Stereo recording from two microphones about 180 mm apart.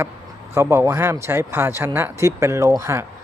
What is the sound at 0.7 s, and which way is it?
Speech, 15° right (ahead or behind).